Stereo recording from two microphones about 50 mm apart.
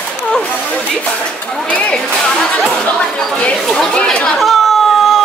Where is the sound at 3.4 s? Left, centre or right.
Left.